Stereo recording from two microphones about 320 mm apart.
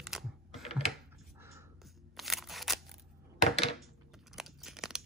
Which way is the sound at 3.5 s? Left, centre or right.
Centre.